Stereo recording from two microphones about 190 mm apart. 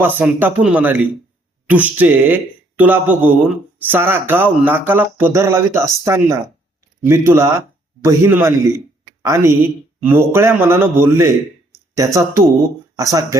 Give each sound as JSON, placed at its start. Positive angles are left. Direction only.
{"t": 0.0, "sound": "speech", "side_deg": -10}